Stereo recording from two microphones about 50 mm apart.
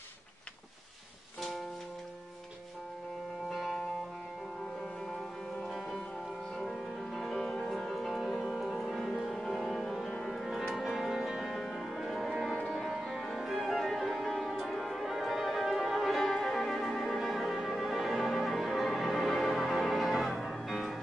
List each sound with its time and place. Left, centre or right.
3.4 s music: centre
5.0 s music: centre
7.7 s music: centre
13.0 s music: centre